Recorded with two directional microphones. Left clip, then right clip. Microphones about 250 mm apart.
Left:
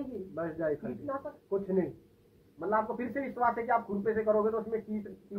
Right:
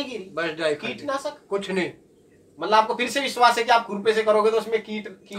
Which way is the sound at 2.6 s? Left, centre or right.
Right.